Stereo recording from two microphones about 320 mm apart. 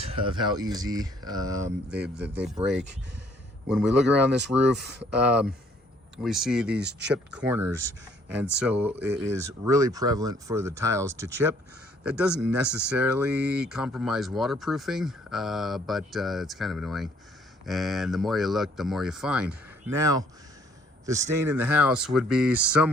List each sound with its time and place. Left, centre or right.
0.0 s speech: centre
6.7 s speech: right
7.1 s speech: centre